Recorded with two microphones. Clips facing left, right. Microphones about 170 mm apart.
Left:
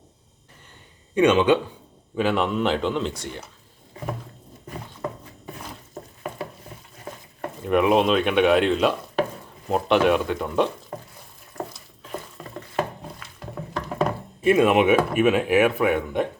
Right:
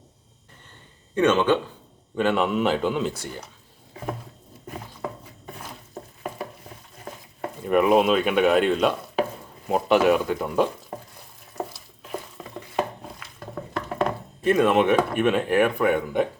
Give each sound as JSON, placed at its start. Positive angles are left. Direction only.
{"t": 1.1, "sound": "speech", "side_deg": 15}
{"t": 2.1, "sound": "speech", "side_deg": 0}
{"t": 5.5, "sound": "a sound", "side_deg": 0}
{"t": 7.1, "sound": "stir", "side_deg": 0}
{"t": 7.5, "sound": "speech", "side_deg": 0}
{"t": 12.0, "sound": "a sound", "side_deg": 0}
{"t": 13.7, "sound": "speech", "side_deg": 0}